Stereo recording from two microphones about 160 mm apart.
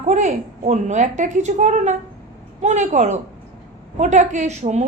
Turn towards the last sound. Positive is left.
turn(degrees=-45)  # may be behind; listen again after turning